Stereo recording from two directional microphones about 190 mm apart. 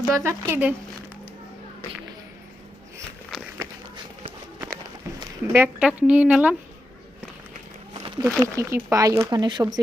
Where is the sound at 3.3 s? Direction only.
Centre (ahead or behind).